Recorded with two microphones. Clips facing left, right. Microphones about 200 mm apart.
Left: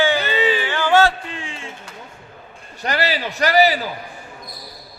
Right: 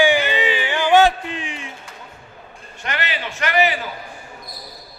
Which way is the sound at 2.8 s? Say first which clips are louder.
Left 5 dB; 35° left (ahead or behind).